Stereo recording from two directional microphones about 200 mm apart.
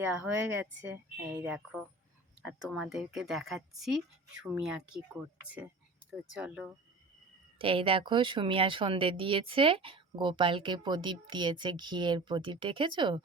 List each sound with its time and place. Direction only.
0.0 s a woman's voice: 10° right (ahead or behind)
6.3 s speech: 5° right (ahead or behind)
7.6 s speech: 25° right (ahead or behind)